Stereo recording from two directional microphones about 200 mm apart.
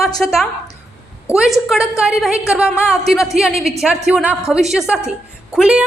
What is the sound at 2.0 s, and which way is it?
A woman's voice, 5° right (ahead or behind).